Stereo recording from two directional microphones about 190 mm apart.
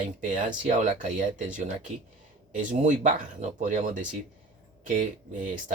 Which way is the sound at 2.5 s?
40° right (ahead or behind).